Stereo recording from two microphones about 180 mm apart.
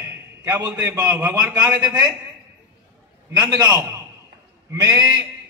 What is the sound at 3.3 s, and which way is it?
A man's voice, 20° right (ahead or behind).